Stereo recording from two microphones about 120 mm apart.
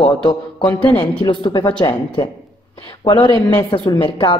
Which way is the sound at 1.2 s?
40° left (ahead or behind).